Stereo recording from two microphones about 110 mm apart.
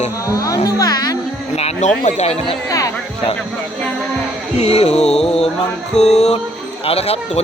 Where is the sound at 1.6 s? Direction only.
70° left (ahead or behind).